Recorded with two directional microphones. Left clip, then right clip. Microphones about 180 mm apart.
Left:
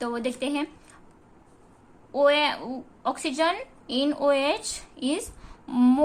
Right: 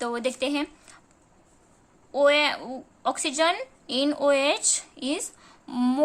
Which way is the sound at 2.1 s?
20° right (ahead or behind).